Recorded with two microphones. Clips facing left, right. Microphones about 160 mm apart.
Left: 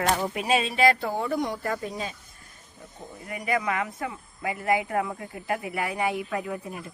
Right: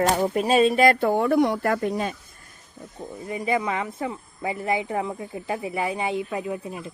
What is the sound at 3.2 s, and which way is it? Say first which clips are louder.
Speech: right 3 dB; 25° right (ahead or behind).